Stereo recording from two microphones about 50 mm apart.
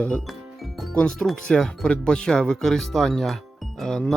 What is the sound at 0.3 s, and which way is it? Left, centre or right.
Music, centre.